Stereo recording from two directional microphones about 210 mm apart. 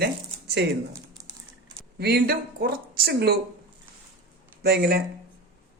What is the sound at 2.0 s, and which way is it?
Speech, 50° right (ahead or behind).